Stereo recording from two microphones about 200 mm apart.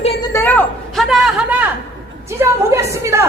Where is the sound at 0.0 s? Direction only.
30° left (ahead or behind).